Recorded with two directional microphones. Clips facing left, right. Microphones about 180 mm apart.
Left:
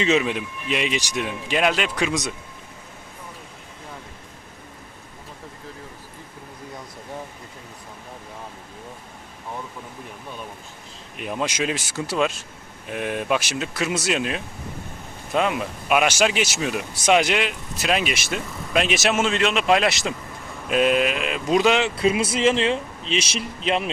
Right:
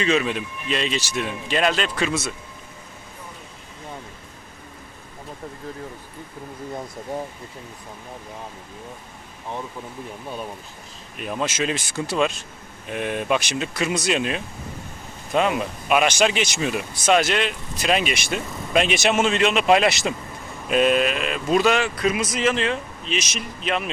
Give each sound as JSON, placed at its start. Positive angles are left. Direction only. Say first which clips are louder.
{"t": 0.0, "sound": "speech", "louder": "left 1 dB", "side_deg": 20}
{"t": 11.2, "sound": "speech", "louder": "even", "side_deg": 15}
{"t": 17.1, "sound": "speech", "louder": "even", "side_deg": 15}